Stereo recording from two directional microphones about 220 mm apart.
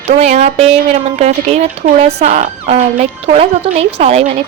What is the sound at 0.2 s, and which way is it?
Speech, 30° right (ahead or behind).